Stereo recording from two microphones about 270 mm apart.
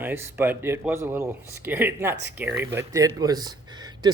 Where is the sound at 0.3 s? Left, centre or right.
Centre.